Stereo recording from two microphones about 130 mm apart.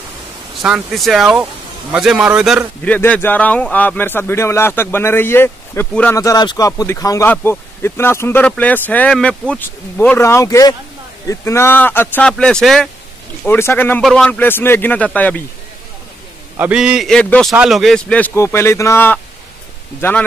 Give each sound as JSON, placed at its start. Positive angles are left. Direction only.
{"t": 0.6, "sound": "speech", "side_deg": -5}
{"t": 2.8, "sound": "a man's voice", "side_deg": 10}
{"t": 6.1, "sound": "a man's voice", "side_deg": 25}
{"t": 13.4, "sound": "a man's voice", "side_deg": 15}
{"t": 16.5, "sound": "a man's voice", "side_deg": -10}
{"t": 17.1, "sound": "a man's voice", "side_deg": 5}